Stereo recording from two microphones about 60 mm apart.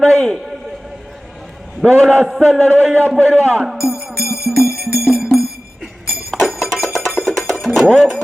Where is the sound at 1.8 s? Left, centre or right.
Centre.